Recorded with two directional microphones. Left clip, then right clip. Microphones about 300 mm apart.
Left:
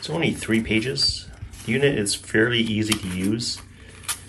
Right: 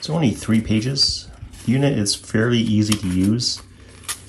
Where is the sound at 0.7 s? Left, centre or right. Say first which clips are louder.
Right 5 dB; right.